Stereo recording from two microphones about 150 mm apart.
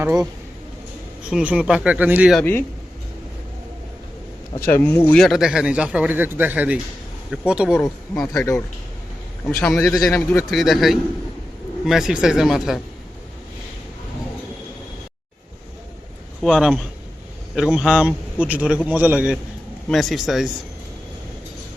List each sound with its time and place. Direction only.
0.0 s speech: 20° right (ahead or behind)
1.3 s a man's voice: 5° right (ahead or behind)
2.4 s speech: 15° left (ahead or behind)
4.5 s speech: 15° left (ahead or behind)
5.2 s a man's voice: centre (ahead or behind)
7.8 s speech: 20° left (ahead or behind)
9.8 s speech: 20° left (ahead or behind)
10.5 s speech: centre (ahead or behind)
16.4 s a man's voice: centre (ahead or behind)